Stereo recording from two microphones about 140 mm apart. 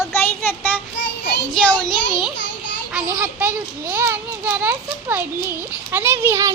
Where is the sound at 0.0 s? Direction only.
15° left (ahead or behind).